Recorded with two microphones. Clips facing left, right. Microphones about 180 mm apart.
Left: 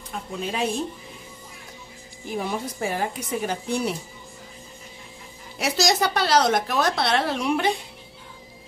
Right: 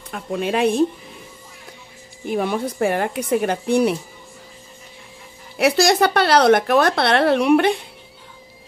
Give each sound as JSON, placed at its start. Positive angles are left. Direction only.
{"t": 0.1, "sound": "a woman's voice", "side_deg": -65}
{"t": 2.2, "sound": "a woman's voice", "side_deg": -65}
{"t": 5.6, "sound": "a woman's voice", "side_deg": -60}